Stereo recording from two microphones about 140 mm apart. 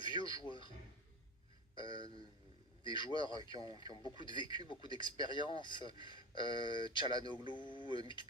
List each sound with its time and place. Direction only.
0.0 s a sound: 35° left (ahead or behind)
0.4 s speech: 35° left (ahead or behind)
1.7 s a sound: 35° left (ahead or behind)
2.8 s speech: 35° left (ahead or behind)
4.4 s speech: 30° right (ahead or behind)
4.7 s speech: 35° left (ahead or behind)